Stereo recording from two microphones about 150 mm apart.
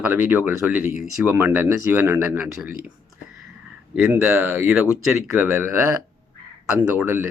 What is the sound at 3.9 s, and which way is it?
Speech, 10° right (ahead or behind).